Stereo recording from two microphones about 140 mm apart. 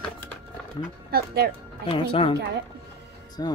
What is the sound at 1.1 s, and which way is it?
Speech, 90° right.